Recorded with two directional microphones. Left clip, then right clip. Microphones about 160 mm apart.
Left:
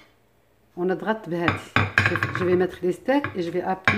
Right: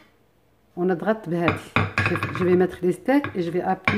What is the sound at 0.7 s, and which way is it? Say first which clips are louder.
Chopping: right 2 dB; 20° right (ahead or behind).